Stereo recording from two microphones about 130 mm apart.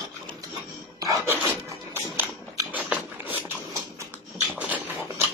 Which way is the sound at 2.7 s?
10° right (ahead or behind).